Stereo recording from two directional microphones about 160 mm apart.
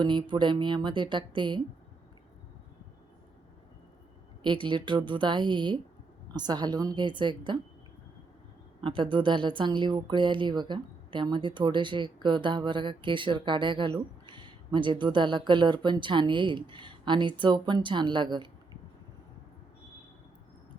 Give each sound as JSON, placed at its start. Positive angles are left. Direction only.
{"t": 0.0, "sound": "speech", "side_deg": -30}
{"t": 4.4, "sound": "speech", "side_deg": -30}
{"t": 8.8, "sound": "speech", "side_deg": -30}